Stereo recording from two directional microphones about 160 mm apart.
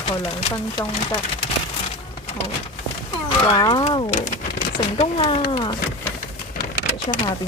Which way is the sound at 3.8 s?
30° left (ahead or behind).